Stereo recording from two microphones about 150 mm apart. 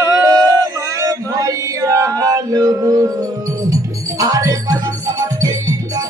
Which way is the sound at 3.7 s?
25° right (ahead or behind).